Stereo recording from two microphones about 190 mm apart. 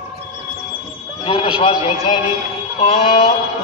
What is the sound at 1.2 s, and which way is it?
Horse, 30° left (ahead or behind).